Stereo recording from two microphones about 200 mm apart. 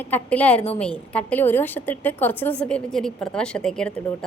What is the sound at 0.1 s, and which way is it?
A woman's voice, 10° left (ahead or behind).